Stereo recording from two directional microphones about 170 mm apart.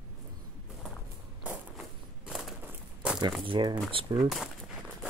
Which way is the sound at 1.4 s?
5° right (ahead or behind).